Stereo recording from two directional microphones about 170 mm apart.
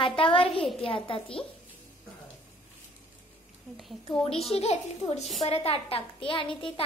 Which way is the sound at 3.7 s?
5° left (ahead or behind).